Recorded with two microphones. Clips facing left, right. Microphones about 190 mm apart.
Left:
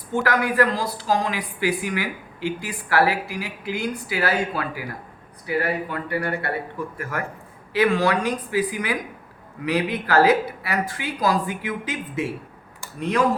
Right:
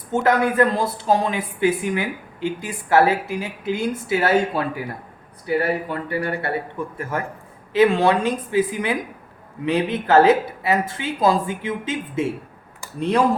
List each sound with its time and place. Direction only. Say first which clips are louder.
0.1 s speech: right 4 dB; 25° right (ahead or behind)